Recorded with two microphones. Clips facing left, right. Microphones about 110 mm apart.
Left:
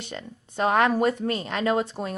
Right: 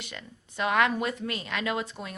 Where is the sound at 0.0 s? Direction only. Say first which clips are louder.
Left 6 dB; 35° left (ahead or behind).